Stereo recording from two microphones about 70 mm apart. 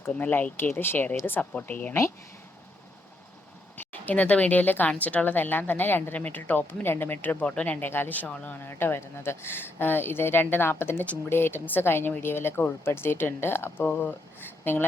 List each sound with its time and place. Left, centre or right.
0.1 s a woman's voice: left
3.8 s a woman's voice: left